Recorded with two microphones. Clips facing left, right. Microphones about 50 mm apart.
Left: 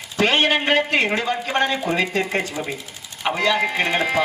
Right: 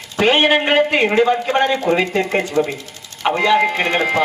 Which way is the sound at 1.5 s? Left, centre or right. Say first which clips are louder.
Right 4 dB; centre.